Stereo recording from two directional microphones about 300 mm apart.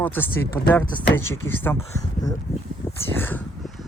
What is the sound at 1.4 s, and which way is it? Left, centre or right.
Speech, centre.